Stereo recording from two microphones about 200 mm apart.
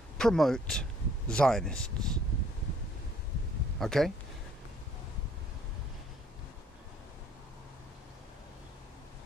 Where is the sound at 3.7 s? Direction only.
Centre (ahead or behind).